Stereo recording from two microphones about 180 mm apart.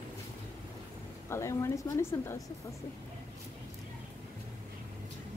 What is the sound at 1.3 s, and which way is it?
A woman's voice, 15° left (ahead or behind).